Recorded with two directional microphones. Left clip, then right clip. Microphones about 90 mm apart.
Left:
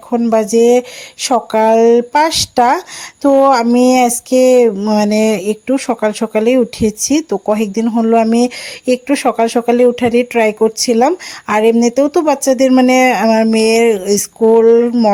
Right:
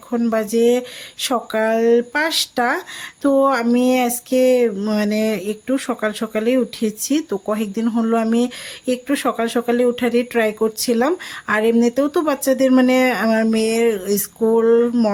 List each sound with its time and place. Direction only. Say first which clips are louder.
0.1 s speech: left 7 dB; 50° left (ahead or behind)
4.8 s speech: left 7 dB; 45° left (ahead or behind)
5.0 s speech: left 7 dB; 65° left (ahead or behind)
7.9 s speech: left 7 dB; 45° left (ahead or behind)
13.5 s speech: left 7 dB; 55° left (ahead or behind); by 15.1 s 40° left (ahead or behind)